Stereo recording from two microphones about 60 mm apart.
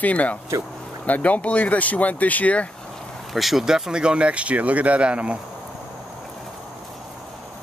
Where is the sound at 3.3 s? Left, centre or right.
Centre.